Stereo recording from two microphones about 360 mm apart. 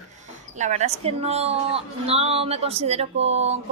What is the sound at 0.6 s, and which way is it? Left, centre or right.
A woman's voice, centre.